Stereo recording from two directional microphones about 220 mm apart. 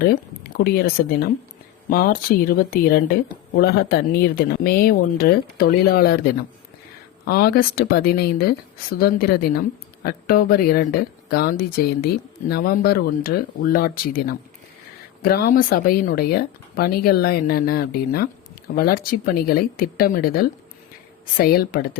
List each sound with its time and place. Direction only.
0.0 s speech: 45° left (ahead or behind)
7.3 s speech: 45° left (ahead or behind)